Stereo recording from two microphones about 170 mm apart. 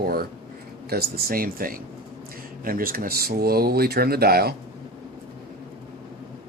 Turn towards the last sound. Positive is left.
turn(degrees=-65)  # may be behind; listen again after turning